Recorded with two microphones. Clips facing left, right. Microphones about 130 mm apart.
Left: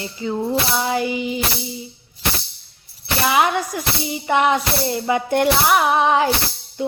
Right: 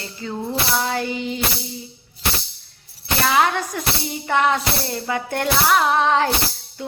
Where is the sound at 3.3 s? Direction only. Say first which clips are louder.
Left 1 dB; 15° left (ahead or behind).